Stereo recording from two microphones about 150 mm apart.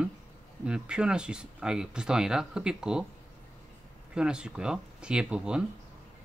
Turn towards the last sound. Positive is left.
turn(degrees=-5)  # may be behind; listen again after turning